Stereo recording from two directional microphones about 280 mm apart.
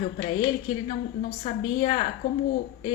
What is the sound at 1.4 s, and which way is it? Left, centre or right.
Speech, left.